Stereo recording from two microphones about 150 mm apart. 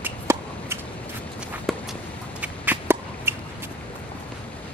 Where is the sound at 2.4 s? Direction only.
15° right (ahead or behind).